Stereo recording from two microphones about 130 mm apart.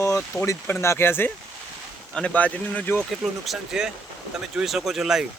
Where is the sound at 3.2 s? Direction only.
5° right (ahead or behind).